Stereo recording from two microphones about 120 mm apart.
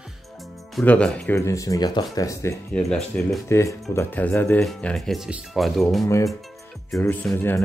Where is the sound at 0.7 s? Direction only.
10° left (ahead or behind).